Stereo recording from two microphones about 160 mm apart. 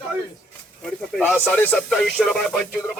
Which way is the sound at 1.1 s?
10° left (ahead or behind).